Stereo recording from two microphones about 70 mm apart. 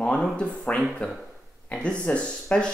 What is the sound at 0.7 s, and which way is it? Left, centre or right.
Speech, left.